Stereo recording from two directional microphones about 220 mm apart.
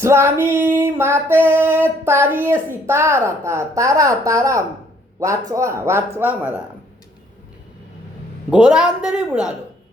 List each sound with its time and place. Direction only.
0.0 s music: 10° right (ahead or behind)
8.4 s a woman's voice: 5° right (ahead or behind)